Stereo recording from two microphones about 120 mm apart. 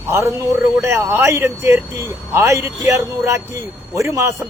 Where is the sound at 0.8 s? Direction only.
20° right (ahead or behind).